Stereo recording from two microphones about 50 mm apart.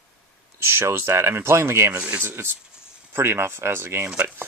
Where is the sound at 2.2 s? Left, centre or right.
Right.